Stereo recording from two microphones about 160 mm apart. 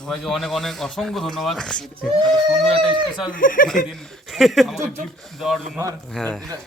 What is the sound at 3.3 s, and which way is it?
Speech, 60° left (ahead or behind).